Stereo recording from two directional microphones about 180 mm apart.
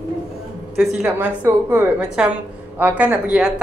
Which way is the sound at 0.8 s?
10° right (ahead or behind).